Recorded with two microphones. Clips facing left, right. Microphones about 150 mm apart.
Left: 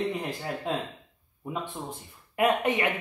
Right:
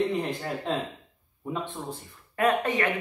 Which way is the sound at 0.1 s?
Centre (ahead or behind).